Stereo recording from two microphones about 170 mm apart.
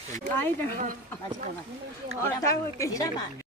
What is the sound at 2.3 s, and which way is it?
Speech, 20° left (ahead or behind).